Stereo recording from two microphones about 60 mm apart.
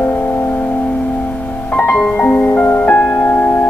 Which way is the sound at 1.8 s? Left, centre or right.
Left.